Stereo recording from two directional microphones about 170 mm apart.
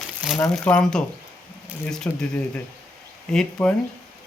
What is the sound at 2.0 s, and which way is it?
Speech, 10° left (ahead or behind).